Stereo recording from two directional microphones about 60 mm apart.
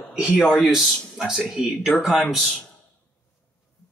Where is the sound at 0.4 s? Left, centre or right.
Centre.